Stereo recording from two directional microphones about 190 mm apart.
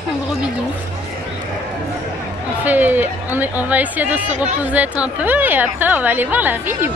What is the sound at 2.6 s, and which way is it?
A woman's voice, 10° right (ahead or behind).